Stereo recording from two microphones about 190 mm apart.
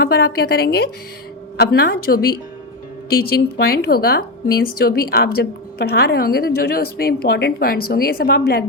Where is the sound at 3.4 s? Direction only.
55° left (ahead or behind).